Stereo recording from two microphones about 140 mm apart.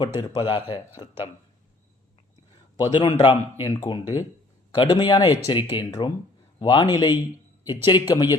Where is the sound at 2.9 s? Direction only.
35° left (ahead or behind).